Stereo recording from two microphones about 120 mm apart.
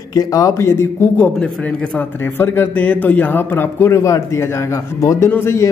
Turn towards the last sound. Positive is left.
turn(degrees=20)  # may be behind; listen again after turning